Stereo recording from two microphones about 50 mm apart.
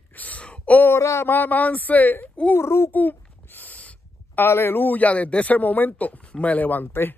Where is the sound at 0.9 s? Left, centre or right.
Left.